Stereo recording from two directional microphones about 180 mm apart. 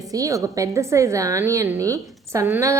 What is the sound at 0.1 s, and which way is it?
A woman's voice, 20° right (ahead or behind).